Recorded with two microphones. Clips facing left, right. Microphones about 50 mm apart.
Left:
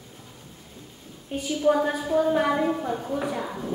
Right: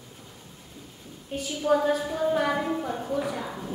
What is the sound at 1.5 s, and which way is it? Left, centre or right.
A woman's voice, centre.